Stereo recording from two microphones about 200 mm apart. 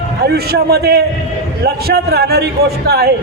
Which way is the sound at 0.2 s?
50° right (ahead or behind).